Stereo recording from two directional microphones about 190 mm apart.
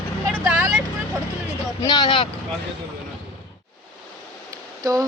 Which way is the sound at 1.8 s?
20° left (ahead or behind).